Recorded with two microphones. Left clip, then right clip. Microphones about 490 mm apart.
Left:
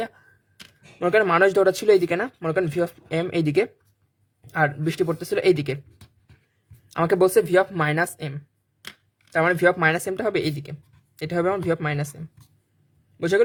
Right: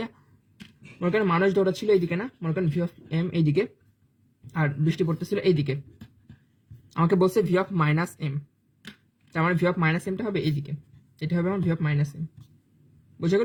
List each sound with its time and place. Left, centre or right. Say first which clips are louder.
0.9 s speech: left 6 dB; left
6.9 s speech: left 4 dB; left